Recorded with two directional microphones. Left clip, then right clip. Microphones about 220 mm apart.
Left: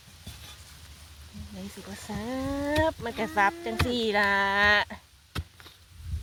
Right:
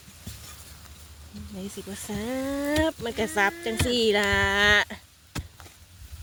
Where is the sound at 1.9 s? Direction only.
25° right (ahead or behind).